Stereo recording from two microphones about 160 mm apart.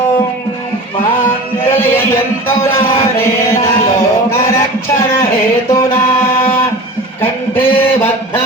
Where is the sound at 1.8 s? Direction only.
15° left (ahead or behind).